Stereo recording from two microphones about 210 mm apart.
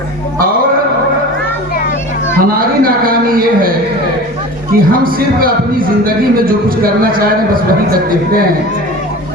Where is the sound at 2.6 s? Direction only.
45° right (ahead or behind).